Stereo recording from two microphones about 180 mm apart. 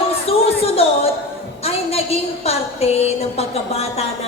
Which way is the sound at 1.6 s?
35° left (ahead or behind).